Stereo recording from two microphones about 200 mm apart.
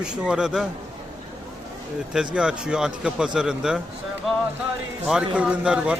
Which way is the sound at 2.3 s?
5° right (ahead or behind).